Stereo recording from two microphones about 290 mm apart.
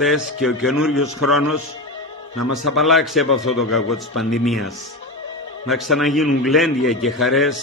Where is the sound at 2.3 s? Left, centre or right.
Left.